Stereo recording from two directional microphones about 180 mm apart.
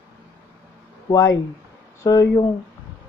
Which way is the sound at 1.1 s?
20° left (ahead or behind).